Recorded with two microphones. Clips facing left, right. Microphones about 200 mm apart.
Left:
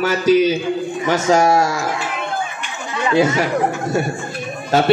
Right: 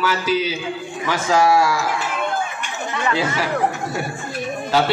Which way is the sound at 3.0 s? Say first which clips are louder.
Left 7 dB; 20° left (ahead or behind).